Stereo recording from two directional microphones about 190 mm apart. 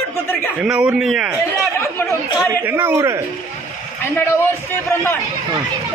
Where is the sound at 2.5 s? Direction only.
10° right (ahead or behind).